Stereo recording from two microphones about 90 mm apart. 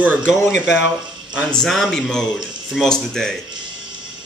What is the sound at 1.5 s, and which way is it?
Speech, 5° left (ahead or behind).